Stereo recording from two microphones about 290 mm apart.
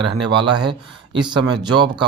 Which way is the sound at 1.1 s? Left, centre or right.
Centre.